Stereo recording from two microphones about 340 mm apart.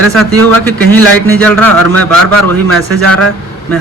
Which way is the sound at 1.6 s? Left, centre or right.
Right.